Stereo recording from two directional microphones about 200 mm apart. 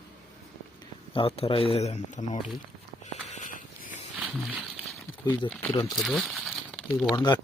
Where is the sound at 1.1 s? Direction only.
25° left (ahead or behind).